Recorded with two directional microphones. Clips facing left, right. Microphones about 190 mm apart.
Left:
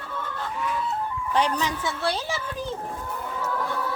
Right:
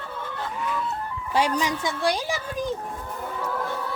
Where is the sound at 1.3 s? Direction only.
10° right (ahead or behind).